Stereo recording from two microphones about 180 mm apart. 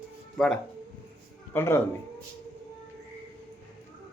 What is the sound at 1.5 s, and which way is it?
Speech, 15° left (ahead or behind).